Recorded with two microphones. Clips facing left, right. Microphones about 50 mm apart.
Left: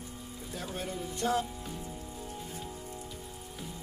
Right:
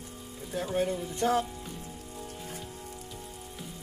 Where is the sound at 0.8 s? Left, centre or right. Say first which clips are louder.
Right 6 dB; right.